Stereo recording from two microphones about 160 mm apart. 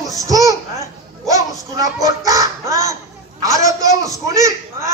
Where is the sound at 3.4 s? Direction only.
20° right (ahead or behind).